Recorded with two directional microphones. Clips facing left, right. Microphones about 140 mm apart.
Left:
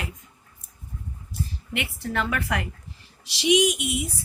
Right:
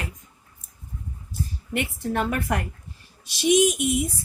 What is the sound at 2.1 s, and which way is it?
A woman's voice, 45° right (ahead or behind).